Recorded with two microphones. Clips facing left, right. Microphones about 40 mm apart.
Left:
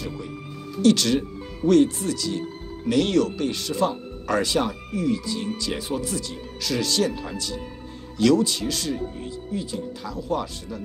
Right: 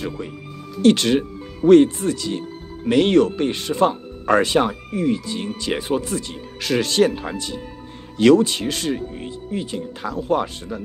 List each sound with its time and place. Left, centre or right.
0.2 s speech: right
0.8 s speech: right